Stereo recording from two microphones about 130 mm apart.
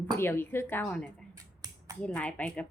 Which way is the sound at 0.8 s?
5° left (ahead or behind).